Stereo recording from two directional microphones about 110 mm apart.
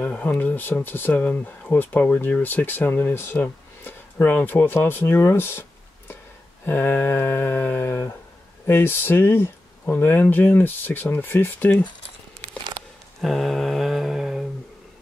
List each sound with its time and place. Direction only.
0.0 s speech: 15° left (ahead or behind)
6.6 s humming: 20° left (ahead or behind)
8.6 s speech: 20° left (ahead or behind)
13.2 s mantra: centre (ahead or behind)